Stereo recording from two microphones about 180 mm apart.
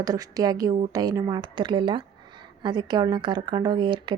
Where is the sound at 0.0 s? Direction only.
20° right (ahead or behind).